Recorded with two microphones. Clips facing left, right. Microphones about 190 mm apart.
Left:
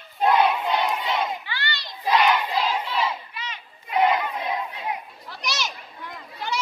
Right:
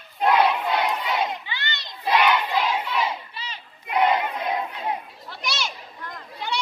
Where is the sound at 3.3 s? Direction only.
30° right (ahead or behind).